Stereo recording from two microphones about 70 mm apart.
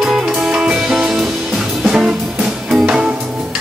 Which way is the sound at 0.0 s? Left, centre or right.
Centre.